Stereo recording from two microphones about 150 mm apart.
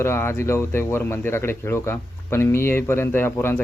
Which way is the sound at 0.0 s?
15° left (ahead or behind).